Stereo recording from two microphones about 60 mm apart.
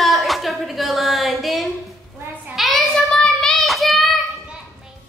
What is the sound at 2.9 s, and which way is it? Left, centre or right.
Child singing, centre.